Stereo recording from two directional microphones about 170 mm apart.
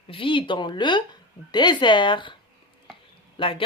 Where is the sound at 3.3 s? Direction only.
30° left (ahead or behind).